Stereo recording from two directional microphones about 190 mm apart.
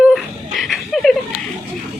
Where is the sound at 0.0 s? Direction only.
Centre (ahead or behind).